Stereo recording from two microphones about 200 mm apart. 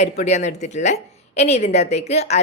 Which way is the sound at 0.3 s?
35° left (ahead or behind).